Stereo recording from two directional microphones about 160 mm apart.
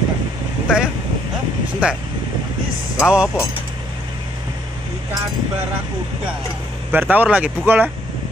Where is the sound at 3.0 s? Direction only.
5° right (ahead or behind).